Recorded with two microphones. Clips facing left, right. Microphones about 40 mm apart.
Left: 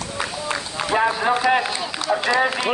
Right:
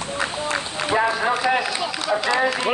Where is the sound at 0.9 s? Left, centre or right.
Left.